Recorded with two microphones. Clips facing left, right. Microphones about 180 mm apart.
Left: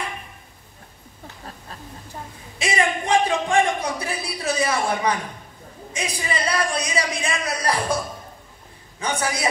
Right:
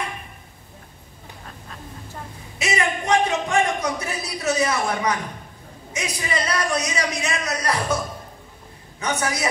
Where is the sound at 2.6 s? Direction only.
30° left (ahead or behind).